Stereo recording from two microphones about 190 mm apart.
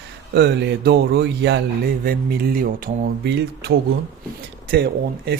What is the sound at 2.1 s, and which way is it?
Speech, 55° right (ahead or behind).